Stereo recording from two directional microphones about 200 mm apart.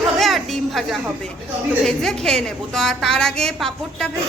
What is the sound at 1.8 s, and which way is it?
Speech, centre (ahead or behind).